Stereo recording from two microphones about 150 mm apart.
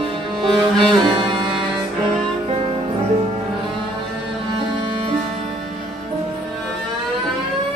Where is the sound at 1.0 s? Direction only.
35° right (ahead or behind).